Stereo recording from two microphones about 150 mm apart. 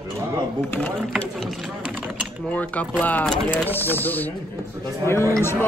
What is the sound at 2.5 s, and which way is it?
Speech, 10° left (ahead or behind).